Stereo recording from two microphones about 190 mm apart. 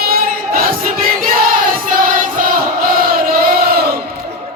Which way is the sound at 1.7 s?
45° right (ahead or behind).